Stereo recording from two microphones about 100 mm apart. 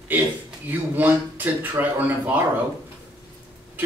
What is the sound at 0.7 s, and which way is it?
Speech, 15° right (ahead or behind).